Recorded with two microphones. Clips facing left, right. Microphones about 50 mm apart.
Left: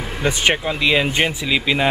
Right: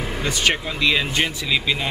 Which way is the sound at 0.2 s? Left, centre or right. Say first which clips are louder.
Left 4 dB; left.